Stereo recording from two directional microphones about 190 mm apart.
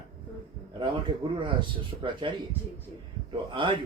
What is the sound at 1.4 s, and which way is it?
Speech, 25° right (ahead or behind).